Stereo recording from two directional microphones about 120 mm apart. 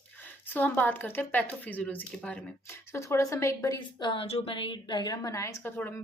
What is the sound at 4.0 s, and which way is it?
Speech, 40° left (ahead or behind).